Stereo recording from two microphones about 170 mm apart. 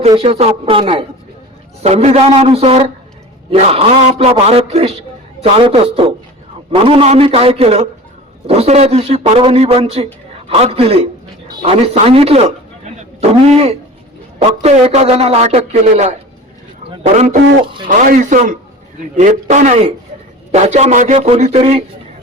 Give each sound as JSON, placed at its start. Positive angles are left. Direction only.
{"t": 0.2, "sound": "a man's voice", "side_deg": -35}